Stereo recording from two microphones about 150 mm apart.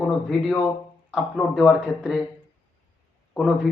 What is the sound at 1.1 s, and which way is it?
Speech, centre (ahead or behind).